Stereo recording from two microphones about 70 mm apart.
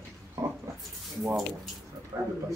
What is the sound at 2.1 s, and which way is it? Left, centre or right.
Speech, right.